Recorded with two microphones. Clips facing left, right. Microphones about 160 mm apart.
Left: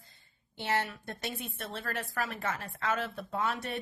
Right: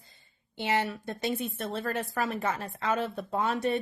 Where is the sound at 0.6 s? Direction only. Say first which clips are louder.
Right 4 dB; 15° right (ahead or behind).